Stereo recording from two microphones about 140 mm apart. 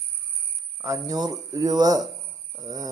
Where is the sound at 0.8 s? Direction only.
25° right (ahead or behind).